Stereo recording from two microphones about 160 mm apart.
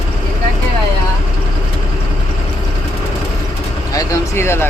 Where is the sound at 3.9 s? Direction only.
20° left (ahead or behind).